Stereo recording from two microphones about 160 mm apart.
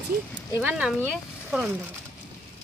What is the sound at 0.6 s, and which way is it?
Speech, 10° right (ahead or behind).